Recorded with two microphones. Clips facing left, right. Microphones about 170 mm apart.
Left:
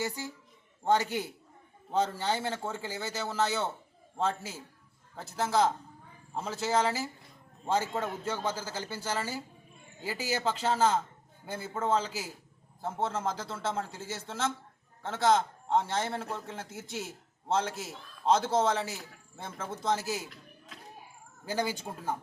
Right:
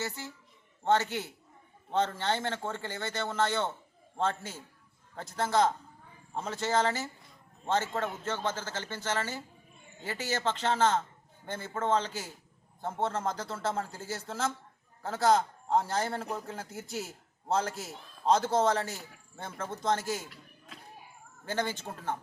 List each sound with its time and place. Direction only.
0.0 s a man's voice: 10° left (ahead or behind)